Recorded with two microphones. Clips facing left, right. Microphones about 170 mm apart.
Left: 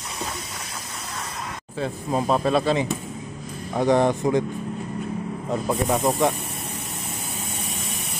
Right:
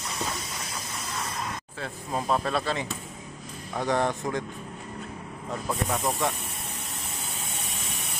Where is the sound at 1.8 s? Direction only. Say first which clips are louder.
Left 8 dB; 25° left (ahead or behind).